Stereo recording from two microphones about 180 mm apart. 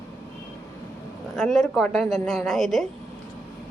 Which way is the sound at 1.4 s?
Centre (ahead or behind).